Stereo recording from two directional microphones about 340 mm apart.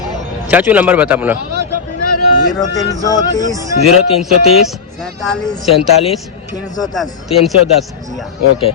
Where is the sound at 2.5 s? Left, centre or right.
Centre.